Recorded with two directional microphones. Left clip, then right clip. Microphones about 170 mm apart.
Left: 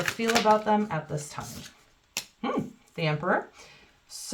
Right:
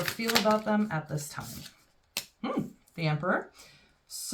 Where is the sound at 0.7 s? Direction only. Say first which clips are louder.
Left 4 dB; 25° left (ahead or behind).